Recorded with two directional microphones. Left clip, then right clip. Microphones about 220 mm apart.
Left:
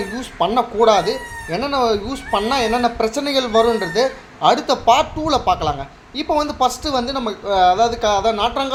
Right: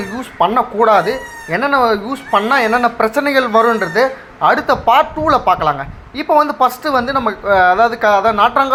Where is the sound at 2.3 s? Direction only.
35° right (ahead or behind).